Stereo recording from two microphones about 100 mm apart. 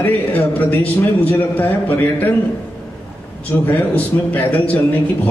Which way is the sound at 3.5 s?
20° left (ahead or behind).